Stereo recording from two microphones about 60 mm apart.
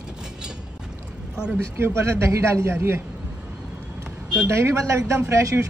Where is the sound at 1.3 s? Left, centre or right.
Centre.